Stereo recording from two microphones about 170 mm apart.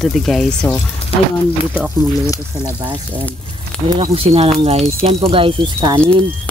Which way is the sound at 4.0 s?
35° right (ahead or behind).